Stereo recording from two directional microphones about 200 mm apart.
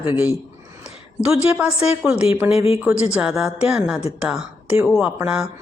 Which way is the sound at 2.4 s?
30° left (ahead or behind).